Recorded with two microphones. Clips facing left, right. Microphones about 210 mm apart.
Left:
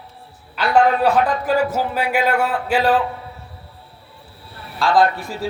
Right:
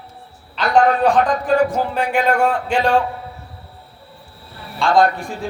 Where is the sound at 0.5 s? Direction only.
5° left (ahead or behind).